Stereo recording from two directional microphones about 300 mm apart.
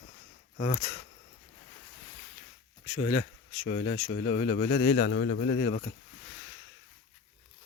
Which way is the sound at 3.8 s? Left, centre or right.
Left.